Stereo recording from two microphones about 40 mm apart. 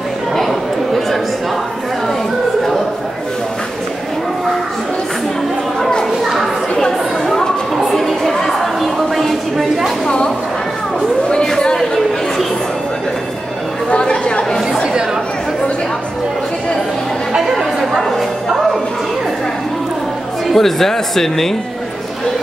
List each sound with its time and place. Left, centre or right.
0.4 s chatter: centre
5.8 s a sound: centre
6.2 s chatter: centre
8.8 s a sound: centre
10.0 s a sound: left
11.6 s chatter: centre
13.8 s chatter: left
14.7 s chatter: centre
20.5 s speech: centre